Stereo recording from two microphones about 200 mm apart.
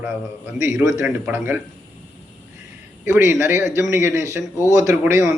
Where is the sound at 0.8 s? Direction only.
15° right (ahead or behind).